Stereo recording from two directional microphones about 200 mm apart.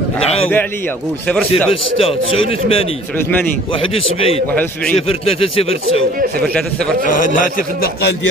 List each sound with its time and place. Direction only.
1.2 s a man's voice: 5° left (ahead or behind)
1.7 s a man's voice: 30° left (ahead or behind)
3.9 s a man's voice: 30° left (ahead or behind)
7.1 s a man's voice: 45° left (ahead or behind)